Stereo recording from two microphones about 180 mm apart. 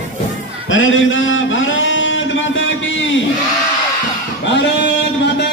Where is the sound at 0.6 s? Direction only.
90° left.